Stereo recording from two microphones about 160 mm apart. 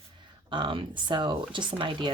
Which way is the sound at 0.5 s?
30° right (ahead or behind).